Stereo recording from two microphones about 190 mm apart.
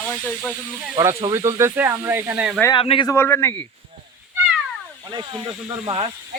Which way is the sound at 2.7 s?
30° left (ahead or behind).